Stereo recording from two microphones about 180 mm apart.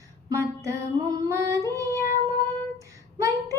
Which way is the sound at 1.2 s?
15° right (ahead or behind).